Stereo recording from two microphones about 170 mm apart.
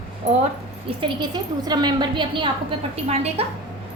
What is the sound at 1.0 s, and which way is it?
A woman's voice, 25° right (ahead or behind).